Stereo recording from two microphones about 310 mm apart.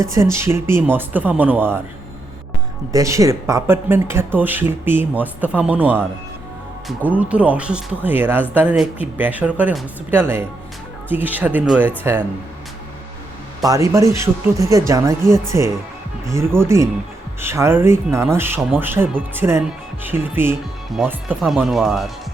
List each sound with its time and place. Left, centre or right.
0.0 s speech: centre
2.9 s speech: centre
13.7 s speech: centre